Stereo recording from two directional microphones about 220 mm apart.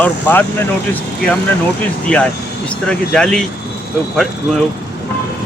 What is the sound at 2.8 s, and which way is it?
Speech, 5° left (ahead or behind).